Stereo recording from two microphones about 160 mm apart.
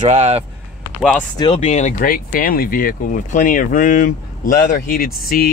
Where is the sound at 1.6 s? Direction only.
45° left (ahead or behind); by 5.5 s 65° left (ahead or behind).